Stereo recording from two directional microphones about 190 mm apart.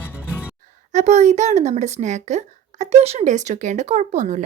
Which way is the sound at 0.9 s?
35° right (ahead or behind).